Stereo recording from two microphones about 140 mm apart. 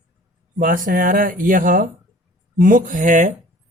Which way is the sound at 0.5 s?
80° right.